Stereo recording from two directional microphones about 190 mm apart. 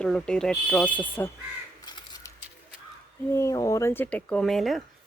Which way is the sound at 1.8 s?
20° left (ahead or behind).